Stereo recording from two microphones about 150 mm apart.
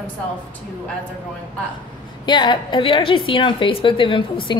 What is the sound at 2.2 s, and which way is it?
A woman's voice, 30° left (ahead or behind).